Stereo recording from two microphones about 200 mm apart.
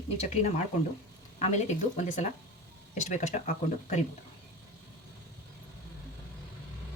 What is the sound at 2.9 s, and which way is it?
Speech, 35° left (ahead or behind).